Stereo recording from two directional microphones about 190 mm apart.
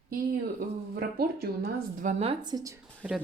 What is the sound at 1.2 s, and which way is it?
Speech, 50° right (ahead or behind).